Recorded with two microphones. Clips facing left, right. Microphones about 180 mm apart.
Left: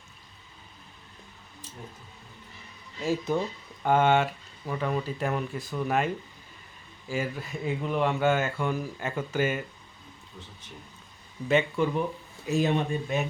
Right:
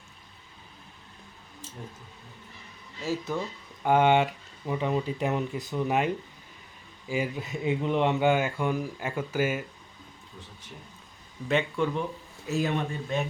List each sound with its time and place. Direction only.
3.0 s speech: 15° left (ahead or behind)
3.8 s speech: 15° right (ahead or behind)
7.1 s speech: 15° right (ahead or behind)
11.4 s speech: 5° left (ahead or behind)
12.5 s speech: 20° left (ahead or behind)